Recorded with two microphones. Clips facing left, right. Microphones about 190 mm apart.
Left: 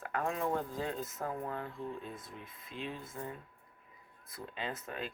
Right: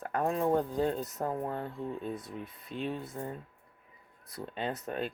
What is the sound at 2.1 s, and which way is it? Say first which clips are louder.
Speech: right 8 dB; 70° right (ahead or behind).